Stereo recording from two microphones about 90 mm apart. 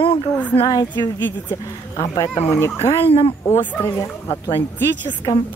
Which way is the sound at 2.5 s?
30° left (ahead or behind).